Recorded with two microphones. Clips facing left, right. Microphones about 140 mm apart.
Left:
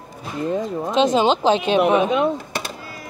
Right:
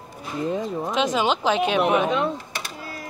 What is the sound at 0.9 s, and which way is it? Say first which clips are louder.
Speech: left 6 dB; 30° left (ahead or behind).